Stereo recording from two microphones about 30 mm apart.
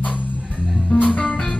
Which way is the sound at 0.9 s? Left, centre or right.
Left.